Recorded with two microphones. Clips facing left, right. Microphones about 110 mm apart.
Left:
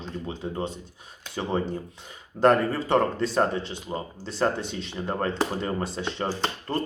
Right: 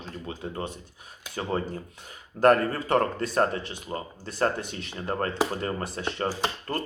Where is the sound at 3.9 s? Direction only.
10° left (ahead or behind).